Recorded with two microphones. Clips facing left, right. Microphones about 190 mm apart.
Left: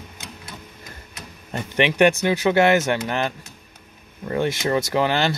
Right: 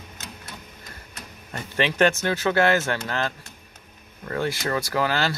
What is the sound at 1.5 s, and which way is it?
Speech, 20° left (ahead or behind).